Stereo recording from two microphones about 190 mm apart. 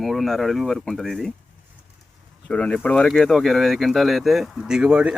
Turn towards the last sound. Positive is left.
turn(degrees=-5)  # may be behind; listen again after turning